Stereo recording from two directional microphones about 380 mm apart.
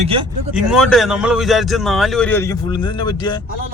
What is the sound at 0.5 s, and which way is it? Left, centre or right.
A man's voice, centre.